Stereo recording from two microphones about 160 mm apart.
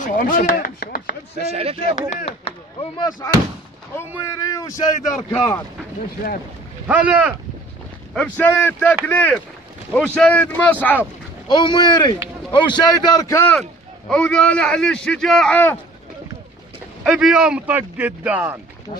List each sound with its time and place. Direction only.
0.0 s chopping: 60° left (ahead or behind)
1.3 s speech: 40° right (ahead or behind)
2.0 s speech: 40° left (ahead or behind)
4.4 s a man's voice: 20° left (ahead or behind)
6.9 s speech: 10° right (ahead or behind)
8.1 s a man's voice: 5° left (ahead or behind)
11.4 s a man's voice: 30° left (ahead or behind)
13.6 s a man's voice: 5° left (ahead or behind)
17.0 s speech: 5° right (ahead or behind)